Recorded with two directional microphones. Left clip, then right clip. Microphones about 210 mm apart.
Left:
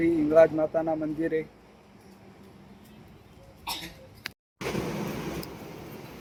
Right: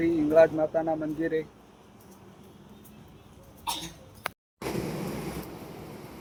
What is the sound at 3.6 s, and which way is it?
Cough, 25° right (ahead or behind).